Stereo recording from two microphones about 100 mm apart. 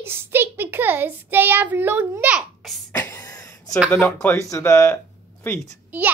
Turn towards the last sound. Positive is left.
turn(degrees=-15)  # may be behind; listen again after turning